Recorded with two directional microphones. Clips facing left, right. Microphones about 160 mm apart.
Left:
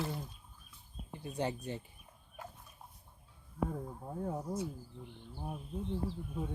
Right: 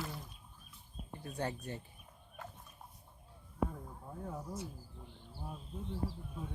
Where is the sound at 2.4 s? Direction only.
10° left (ahead or behind).